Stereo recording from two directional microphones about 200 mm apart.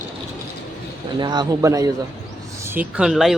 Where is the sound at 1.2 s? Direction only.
20° right (ahead or behind).